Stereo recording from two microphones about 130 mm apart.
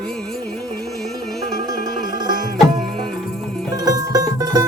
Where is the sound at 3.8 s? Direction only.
25° right (ahead or behind).